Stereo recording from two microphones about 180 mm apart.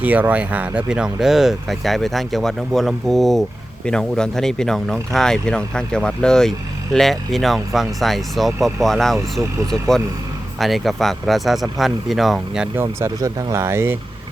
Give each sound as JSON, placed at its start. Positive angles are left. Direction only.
{"t": 0.0, "sound": "speech", "side_deg": -10}
{"t": 9.4, "sound": "speech", "side_deg": -15}
{"t": 10.6, "sound": "speech", "side_deg": 0}
{"t": 12.7, "sound": "speech", "side_deg": -15}